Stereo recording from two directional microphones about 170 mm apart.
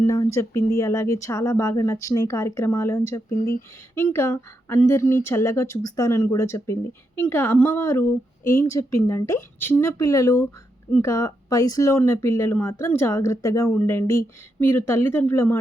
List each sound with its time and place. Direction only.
0.0 s speech: 20° left (ahead or behind)